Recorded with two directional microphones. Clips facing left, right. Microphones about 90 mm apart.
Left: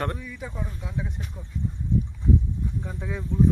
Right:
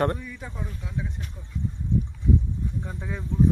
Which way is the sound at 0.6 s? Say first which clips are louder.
Left 1 dB; 20° left (ahead or behind).